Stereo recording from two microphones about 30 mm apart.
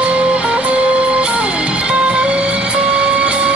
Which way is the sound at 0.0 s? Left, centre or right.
Right.